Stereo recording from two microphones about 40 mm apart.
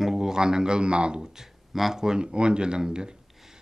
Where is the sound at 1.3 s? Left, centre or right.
Centre.